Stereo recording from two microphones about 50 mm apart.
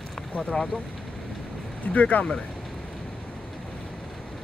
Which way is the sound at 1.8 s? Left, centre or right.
Left.